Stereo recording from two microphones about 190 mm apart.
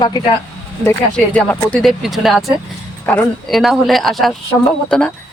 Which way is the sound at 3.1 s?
10° left (ahead or behind).